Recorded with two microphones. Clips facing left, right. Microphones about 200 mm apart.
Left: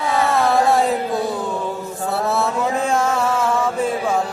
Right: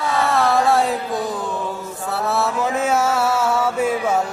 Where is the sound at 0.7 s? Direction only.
Centre (ahead or behind).